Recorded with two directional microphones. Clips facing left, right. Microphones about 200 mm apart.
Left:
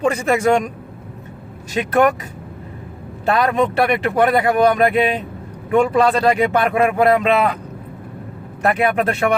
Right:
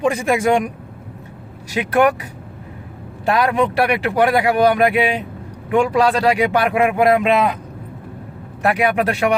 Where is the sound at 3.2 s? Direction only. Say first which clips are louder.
Even; 10° right (ahead or behind).